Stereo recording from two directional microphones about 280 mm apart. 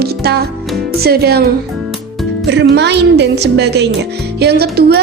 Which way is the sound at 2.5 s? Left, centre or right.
Right.